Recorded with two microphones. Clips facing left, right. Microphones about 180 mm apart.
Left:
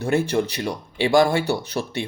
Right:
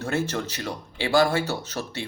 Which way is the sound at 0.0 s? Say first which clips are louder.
Left 6 dB; 15° left (ahead or behind).